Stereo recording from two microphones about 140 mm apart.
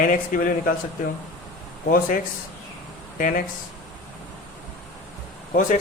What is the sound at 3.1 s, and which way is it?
Speech, 75° left (ahead or behind).